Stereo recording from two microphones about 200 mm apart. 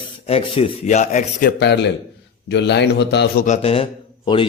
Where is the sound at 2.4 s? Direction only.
60° left (ahead or behind).